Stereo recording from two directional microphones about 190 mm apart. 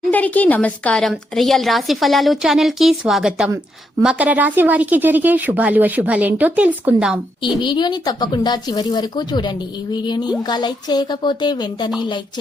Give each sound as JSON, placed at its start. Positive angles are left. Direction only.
{"t": 0.1, "sound": "a woman's voice", "side_deg": 10}
{"t": 7.4, "sound": "speech", "side_deg": 25}